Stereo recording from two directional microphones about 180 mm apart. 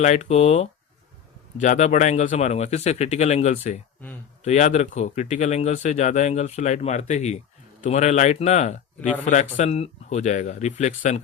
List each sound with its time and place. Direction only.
0.0 s speech: 40° left (ahead or behind)